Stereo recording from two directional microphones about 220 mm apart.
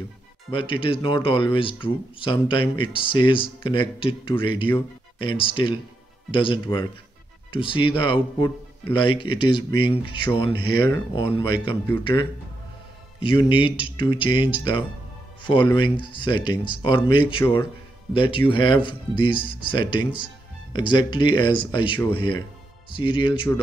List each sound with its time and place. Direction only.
0.5 s speech: 25° left (ahead or behind)
13.2 s speech: 25° left (ahead or behind)